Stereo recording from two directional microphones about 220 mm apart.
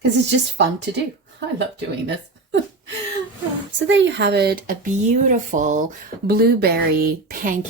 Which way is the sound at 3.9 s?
55° right (ahead or behind).